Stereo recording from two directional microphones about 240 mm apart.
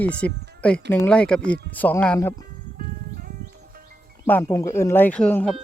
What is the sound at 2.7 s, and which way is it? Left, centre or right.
Music, right.